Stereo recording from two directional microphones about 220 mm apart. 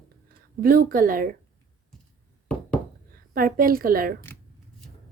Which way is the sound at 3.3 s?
40° right (ahead or behind).